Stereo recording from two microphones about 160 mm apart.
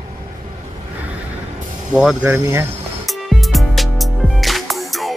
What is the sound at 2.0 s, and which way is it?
Speech, 5° right (ahead or behind).